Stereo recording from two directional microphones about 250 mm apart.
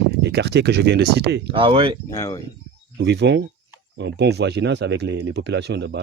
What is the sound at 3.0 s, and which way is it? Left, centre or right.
Speech, right.